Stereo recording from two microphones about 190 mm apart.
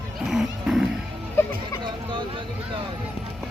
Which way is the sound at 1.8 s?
25° right (ahead or behind).